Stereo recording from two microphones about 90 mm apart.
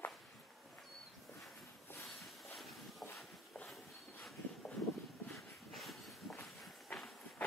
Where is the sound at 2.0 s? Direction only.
Centre (ahead or behind).